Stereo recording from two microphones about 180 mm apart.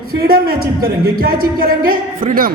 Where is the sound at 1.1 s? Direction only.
55° right (ahead or behind).